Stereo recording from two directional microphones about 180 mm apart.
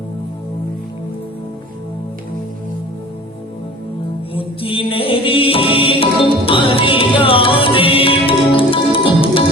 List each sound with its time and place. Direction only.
4.4 s music: 30° left (ahead or behind)